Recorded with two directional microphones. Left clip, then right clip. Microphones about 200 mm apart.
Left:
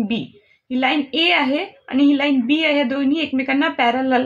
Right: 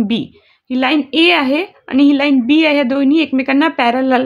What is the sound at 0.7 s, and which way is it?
A woman's voice, 55° right (ahead or behind).